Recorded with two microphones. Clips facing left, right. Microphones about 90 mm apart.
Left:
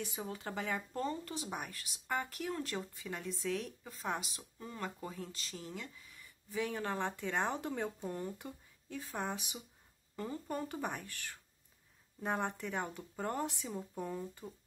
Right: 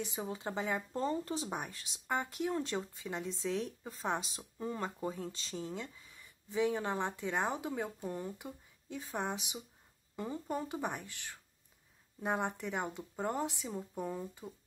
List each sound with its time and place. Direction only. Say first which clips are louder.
0.0 s speech: right 3 dB; 20° right (ahead or behind)